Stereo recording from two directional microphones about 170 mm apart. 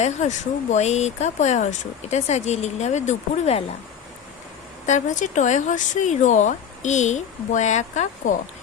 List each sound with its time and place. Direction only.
0.0 s speech: 45° left (ahead or behind)
4.9 s speech: 45° left (ahead or behind)